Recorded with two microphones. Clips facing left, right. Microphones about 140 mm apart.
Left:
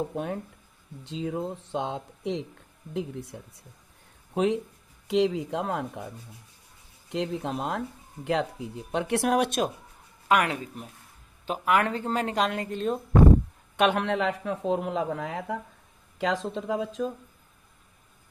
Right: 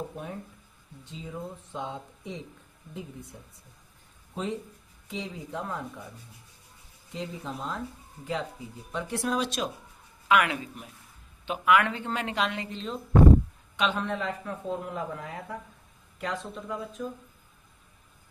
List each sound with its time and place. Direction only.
1.0 s speech: 80° left
4.4 s speech: 70° left (ahead or behind)
7.1 s speech: 75° left (ahead or behind); by 9.7 s 50° left (ahead or behind)
10.2 s a woman's voice: 40° left (ahead or behind); by 17.1 s 90° left